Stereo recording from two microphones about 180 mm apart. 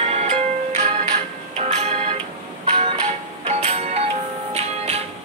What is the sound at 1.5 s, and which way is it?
Music, 35° right (ahead or behind).